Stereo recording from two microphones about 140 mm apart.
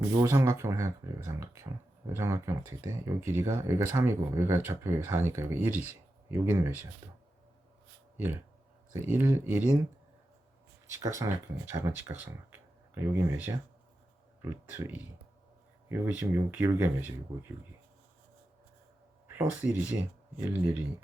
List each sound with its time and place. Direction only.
0.1 s speech: 20° right (ahead or behind)
8.9 s speech: 15° right (ahead or behind)
10.9 s speech: 20° right (ahead or behind)
19.3 s speech: 20° right (ahead or behind)